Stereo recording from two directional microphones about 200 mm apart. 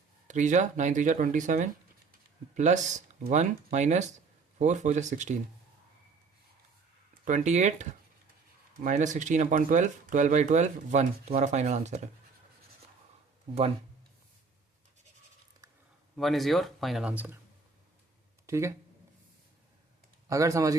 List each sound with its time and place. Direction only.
0.3 s speech: 35° right (ahead or behind)
7.3 s speech: 35° right (ahead or behind)
16.1 s speech: centre (ahead or behind)
18.4 s speech: 15° right (ahead or behind)
20.2 s speech: 15° right (ahead or behind)